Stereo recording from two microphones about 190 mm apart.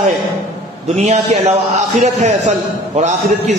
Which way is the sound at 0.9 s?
35° right (ahead or behind).